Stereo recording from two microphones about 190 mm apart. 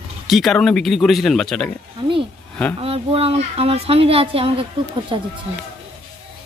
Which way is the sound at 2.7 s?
30° right (ahead or behind).